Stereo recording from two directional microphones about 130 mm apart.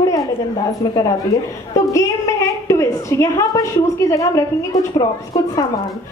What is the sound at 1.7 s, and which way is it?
A woman's voice, 25° left (ahead or behind).